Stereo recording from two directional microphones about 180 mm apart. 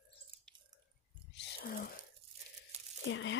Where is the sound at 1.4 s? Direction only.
65° left (ahead or behind).